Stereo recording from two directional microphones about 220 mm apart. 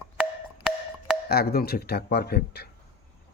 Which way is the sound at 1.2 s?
45° left (ahead or behind).